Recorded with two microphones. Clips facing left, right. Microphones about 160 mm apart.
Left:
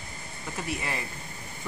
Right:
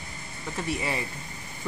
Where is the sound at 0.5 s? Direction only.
Centre (ahead or behind).